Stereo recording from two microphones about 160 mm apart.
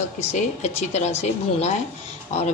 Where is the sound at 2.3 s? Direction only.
45° left (ahead or behind).